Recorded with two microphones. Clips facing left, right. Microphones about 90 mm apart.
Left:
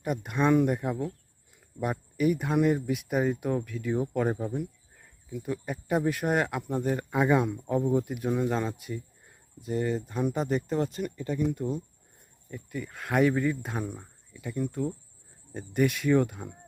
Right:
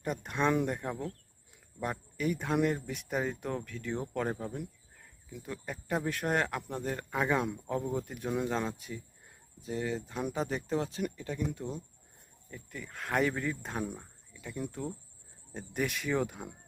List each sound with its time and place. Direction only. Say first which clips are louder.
0.0 s speech: left 4 dB; 5° left (ahead or behind)